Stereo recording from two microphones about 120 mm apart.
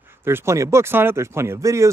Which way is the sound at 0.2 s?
20° right (ahead or behind).